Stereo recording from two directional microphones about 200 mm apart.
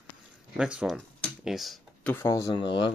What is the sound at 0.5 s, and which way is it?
Speech, 5° right (ahead or behind).